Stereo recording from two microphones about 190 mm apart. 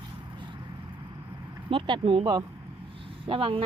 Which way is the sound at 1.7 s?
30° right (ahead or behind).